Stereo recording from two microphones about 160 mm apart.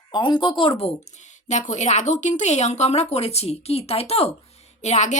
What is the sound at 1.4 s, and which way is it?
Speech, 50° left (ahead or behind).